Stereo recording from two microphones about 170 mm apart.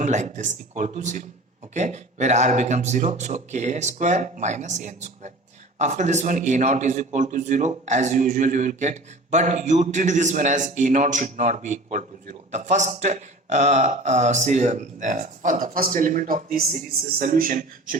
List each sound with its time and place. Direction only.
0.0 s a man's voice: 45° right (ahead or behind)